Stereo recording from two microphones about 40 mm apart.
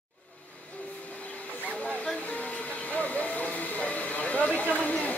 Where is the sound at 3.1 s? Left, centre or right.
Left.